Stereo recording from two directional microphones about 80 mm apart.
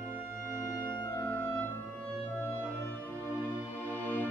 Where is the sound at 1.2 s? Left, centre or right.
Left.